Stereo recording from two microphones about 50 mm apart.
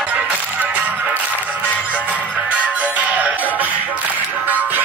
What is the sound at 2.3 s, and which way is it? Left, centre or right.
Music, right.